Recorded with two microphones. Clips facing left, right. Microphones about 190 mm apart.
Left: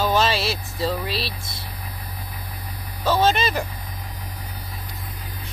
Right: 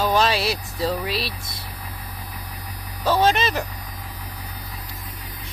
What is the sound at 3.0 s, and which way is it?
Speech, centre (ahead or behind).